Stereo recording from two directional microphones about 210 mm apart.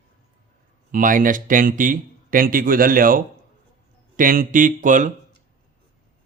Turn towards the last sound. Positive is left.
turn(degrees=-40)  # may be behind; listen again after turning